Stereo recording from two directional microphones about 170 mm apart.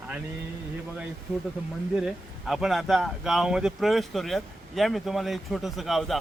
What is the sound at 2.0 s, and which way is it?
Speech, 5° right (ahead or behind).